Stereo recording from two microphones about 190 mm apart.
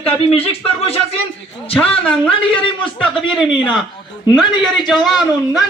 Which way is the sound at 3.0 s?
Centre (ahead or behind).